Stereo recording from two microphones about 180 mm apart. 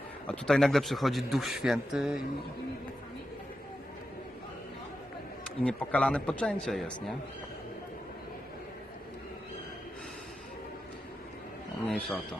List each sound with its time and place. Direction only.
0.3 s speech: 5° left (ahead or behind)
5.6 s speech: 5° left (ahead or behind)
11.9 s speech: 5° left (ahead or behind)